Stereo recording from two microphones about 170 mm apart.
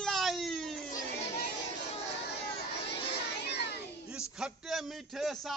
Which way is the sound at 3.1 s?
75° left (ahead or behind).